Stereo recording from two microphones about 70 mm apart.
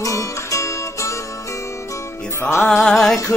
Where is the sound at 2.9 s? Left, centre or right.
Centre.